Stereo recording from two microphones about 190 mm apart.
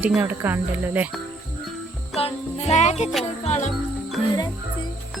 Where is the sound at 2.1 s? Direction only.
35° left (ahead or behind).